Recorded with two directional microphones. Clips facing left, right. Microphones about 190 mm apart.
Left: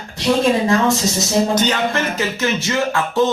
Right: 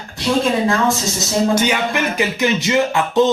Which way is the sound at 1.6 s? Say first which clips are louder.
Even; 10° right (ahead or behind).